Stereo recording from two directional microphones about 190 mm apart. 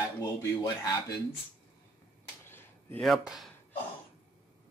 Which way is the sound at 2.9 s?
Centre (ahead or behind).